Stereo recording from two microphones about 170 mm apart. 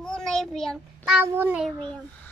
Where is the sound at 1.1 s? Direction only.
10° right (ahead or behind).